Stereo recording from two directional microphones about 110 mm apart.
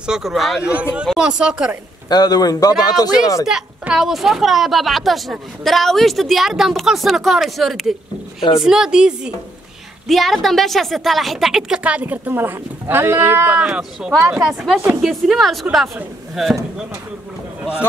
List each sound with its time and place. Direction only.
0.0 s a woman's voice: 5° right (ahead or behind)
2.0 s a man's voice: 35° left (ahead or behind)
3.4 s a woman's voice: 5° right (ahead or behind)